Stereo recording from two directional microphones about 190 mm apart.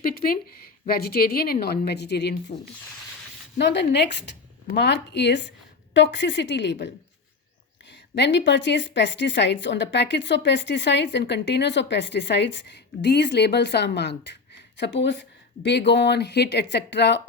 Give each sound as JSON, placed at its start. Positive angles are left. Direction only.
{"t": 0.0, "sound": "a woman's voice", "side_deg": 50}
{"t": 2.5, "sound": "speech", "side_deg": 35}
{"t": 3.6, "sound": "a woman's voice", "side_deg": 65}